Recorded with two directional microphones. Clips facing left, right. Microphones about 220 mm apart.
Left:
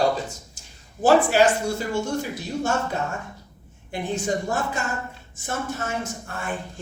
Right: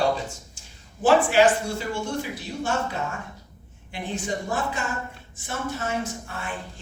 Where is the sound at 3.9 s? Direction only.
45° left (ahead or behind).